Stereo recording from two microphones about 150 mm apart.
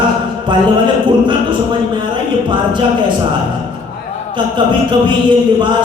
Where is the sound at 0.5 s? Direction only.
30° right (ahead or behind).